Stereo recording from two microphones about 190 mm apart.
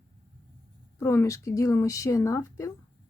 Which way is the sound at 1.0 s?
15° left (ahead or behind).